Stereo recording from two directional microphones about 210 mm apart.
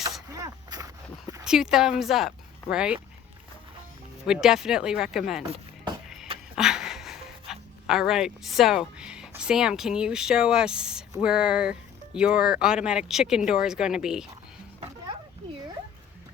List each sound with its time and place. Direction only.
0.3 s a sound: 15° right (ahead or behind)
1.5 s speech: 5° right (ahead or behind)
4.3 s speech: centre (ahead or behind)
6.6 s speech: centre (ahead or behind)